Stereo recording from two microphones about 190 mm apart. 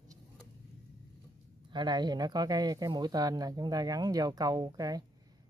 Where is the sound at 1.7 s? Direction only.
25° right (ahead or behind).